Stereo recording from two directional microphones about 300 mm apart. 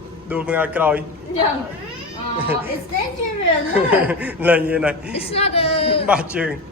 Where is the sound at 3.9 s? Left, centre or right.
Centre.